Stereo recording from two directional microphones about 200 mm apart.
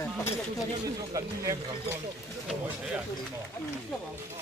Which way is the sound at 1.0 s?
15° right (ahead or behind).